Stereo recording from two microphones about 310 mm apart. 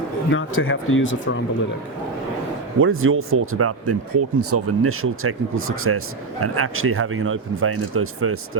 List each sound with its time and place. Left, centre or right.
0.3 s speech: left
2.7 s speech: right